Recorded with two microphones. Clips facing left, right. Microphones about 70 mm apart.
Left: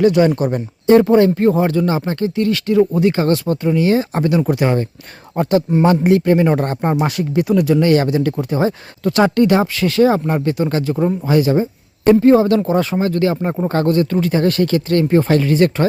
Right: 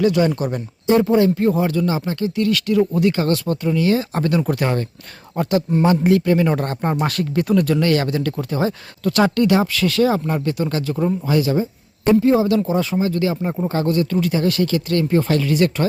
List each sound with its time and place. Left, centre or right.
0.0 s speech: left
0.9 s speech: left
4.4 s speech: centre
5.4 s speech: left
6.9 s speech: centre; by 11.7 s left
12.0 s speech: left